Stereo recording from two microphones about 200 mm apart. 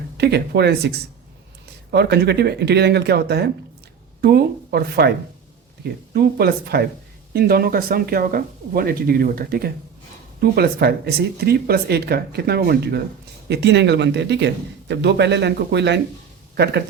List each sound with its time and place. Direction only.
0.2 s speech: 55° right (ahead or behind)